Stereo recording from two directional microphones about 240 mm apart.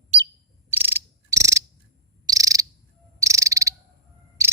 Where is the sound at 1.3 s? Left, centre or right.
Centre.